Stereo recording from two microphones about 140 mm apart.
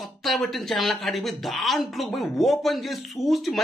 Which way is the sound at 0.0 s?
Centre (ahead or behind).